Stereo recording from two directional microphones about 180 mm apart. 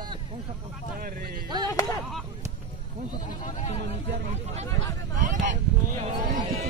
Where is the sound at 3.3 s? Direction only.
45° left (ahead or behind).